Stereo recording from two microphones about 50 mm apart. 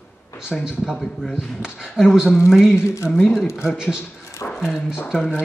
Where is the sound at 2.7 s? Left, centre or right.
Left.